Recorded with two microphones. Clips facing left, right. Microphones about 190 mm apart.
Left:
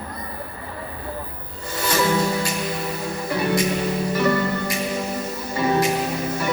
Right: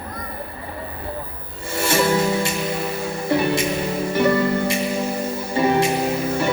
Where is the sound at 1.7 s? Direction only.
25° right (ahead or behind).